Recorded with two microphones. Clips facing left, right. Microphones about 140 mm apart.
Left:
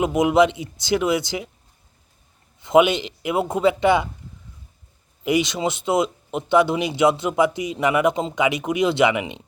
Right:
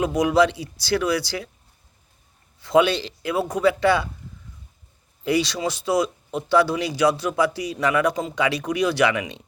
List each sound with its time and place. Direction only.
0.0 s speech: 20° left (ahead or behind)
2.6 s speech: 20° left (ahead or behind)
5.2 s speech: 15° left (ahead or behind)